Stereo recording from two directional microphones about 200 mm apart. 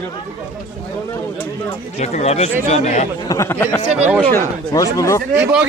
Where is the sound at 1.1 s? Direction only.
15° left (ahead or behind).